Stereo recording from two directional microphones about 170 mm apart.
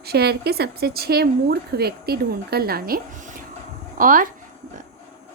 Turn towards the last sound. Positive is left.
turn(degrees=-55)  # may be behind; listen again after turning